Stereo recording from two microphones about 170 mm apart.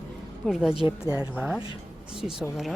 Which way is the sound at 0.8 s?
20° right (ahead or behind).